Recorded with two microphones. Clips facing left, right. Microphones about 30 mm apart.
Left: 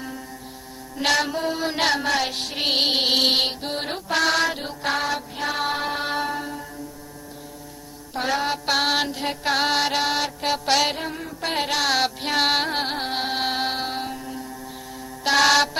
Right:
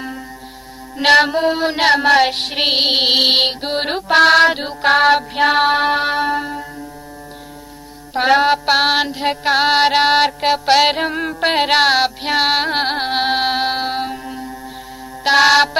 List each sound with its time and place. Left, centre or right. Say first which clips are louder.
0.9 s music: right 10 dB; right
2.6 s music: right 5 dB; right
4.9 s music: right 13 dB; right
5.6 s music: right 10 dB; right
8.2 s music: right 11 dB; right
8.5 s music: right 7 dB; right
10.5 s music: right 6 dB; right
10.8 s music: right 10 dB; right
11.2 s music: right 10 dB; right
11.9 s music: right 6 dB; right
12.7 s music: right 7 dB; right